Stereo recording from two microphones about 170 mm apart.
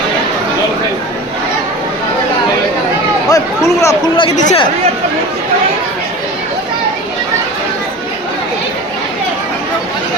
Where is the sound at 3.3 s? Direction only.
15° left (ahead or behind).